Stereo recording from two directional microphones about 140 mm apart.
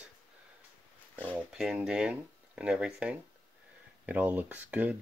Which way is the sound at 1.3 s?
5° right (ahead or behind).